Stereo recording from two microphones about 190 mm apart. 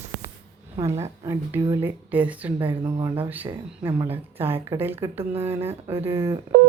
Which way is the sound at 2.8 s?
25° right (ahead or behind).